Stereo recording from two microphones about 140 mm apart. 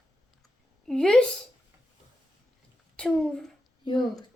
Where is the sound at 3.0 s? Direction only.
5° left (ahead or behind).